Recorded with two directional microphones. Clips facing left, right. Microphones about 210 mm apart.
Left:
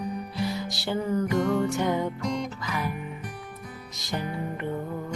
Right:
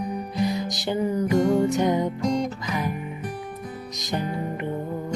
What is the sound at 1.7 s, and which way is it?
Music, 20° right (ahead or behind).